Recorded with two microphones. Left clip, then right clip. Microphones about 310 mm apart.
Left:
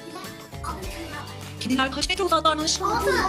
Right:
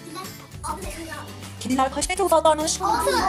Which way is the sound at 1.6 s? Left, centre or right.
Centre.